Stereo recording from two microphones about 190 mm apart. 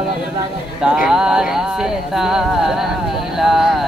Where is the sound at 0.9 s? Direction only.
5° right (ahead or behind).